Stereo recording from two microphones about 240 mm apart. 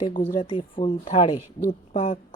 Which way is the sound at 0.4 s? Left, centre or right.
Left.